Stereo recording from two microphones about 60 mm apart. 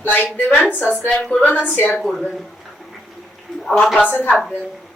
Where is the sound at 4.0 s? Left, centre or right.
Left.